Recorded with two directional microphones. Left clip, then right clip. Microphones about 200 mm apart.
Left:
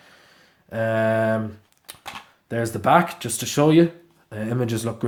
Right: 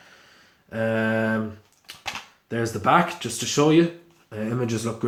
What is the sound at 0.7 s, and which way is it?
Mantra, 50° left (ahead or behind).